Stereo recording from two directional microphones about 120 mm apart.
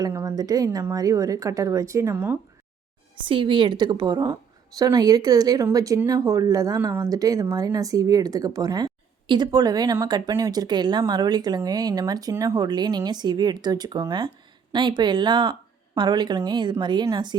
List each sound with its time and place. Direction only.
0.0 s speech: 30° right (ahead or behind)
2.1 s speech: 15° right (ahead or behind)
3.2 s speech: 45° right (ahead or behind)